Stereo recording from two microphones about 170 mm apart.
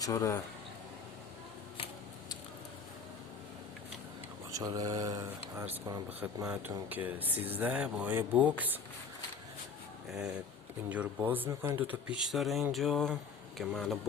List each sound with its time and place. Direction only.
0.0 s speech: 20° left (ahead or behind)
4.5 s speech: 20° right (ahead or behind)
10.1 s speech: 5° right (ahead or behind)